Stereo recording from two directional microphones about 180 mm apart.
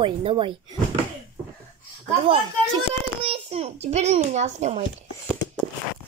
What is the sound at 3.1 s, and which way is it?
A child's voice, 35° right (ahead or behind).